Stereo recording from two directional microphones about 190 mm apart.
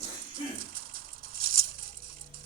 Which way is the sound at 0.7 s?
50° right (ahead or behind).